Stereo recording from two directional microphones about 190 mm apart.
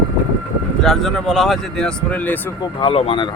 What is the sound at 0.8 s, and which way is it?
Speech, centre (ahead or behind).